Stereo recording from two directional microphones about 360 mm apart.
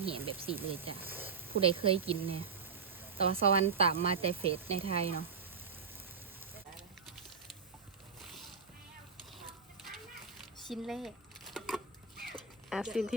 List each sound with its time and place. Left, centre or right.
0.0 s speech: centre
10.7 s speech: centre
11.5 s a sound: centre